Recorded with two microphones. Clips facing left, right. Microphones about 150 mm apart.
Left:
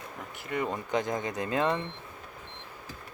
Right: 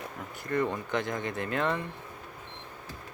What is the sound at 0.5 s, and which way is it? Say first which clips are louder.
Speech: right 1 dB; 10° left (ahead or behind).